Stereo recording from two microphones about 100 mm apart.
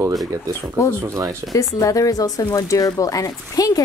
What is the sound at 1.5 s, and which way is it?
Speech, 35° left (ahead or behind).